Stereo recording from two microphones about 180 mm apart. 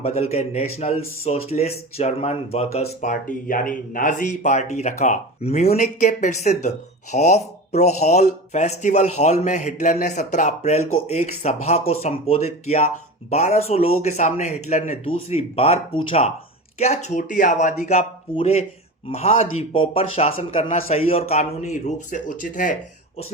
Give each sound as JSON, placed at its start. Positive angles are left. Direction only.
{"t": 0.0, "sound": "speech", "side_deg": 35}